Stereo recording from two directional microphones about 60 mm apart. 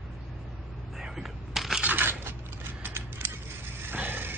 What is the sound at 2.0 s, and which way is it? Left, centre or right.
Scissors, right.